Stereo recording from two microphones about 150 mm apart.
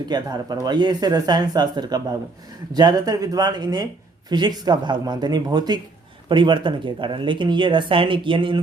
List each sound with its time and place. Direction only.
0.1 s speech: 25° right (ahead or behind)